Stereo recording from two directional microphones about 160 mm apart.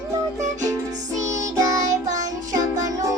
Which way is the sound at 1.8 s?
50° right (ahead or behind).